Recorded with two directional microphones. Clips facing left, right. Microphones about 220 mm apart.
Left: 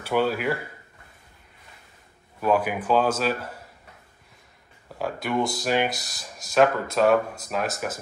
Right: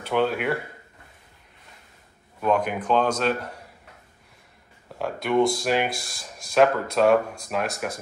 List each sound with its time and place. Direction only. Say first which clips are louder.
0.0 s speech: even; 5° left (ahead or behind)
2.4 s speech: even; 5° left (ahead or behind)
4.8 s speech: right 1 dB; centre (ahead or behind)
5.9 s speech: even; 30° right (ahead or behind)
6.1 s speech: right 1 dB; centre (ahead or behind)